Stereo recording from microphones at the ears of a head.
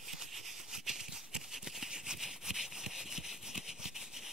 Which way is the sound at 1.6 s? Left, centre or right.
Centre.